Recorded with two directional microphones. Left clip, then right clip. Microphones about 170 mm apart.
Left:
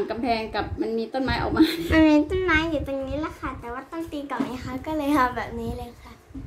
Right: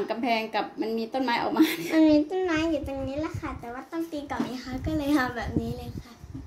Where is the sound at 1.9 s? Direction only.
40° left (ahead or behind).